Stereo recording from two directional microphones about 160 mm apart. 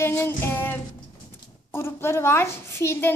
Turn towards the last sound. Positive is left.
turn(degrees=15)  # may be behind; listen again after turning